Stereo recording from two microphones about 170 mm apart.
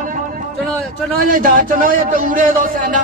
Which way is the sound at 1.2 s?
55° right (ahead or behind).